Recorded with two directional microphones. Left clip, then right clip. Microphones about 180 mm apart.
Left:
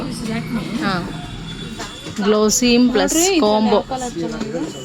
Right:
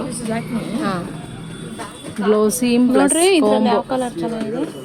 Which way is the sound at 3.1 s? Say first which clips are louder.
Right 1 dB; 65° right (ahead or behind).